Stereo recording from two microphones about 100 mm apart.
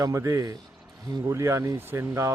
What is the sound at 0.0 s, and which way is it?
Speech, 30° right (ahead or behind).